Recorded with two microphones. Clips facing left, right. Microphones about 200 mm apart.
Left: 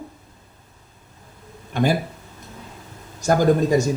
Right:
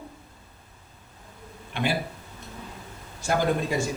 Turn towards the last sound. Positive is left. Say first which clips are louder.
# left 8 dB
turn(degrees=40)  # may be behind; listen again after turning